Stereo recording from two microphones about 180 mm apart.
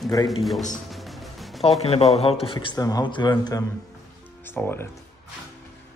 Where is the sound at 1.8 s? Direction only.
35° left (ahead or behind).